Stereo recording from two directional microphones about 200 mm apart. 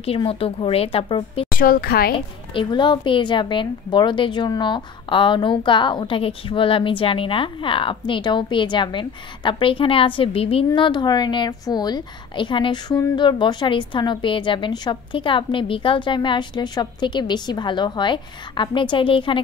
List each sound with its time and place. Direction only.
0.0 s a woman's voice: 30° left (ahead or behind)
1.6 s a woman's voice: 45° left (ahead or behind)
2.1 s a woman's voice: 25° left (ahead or behind)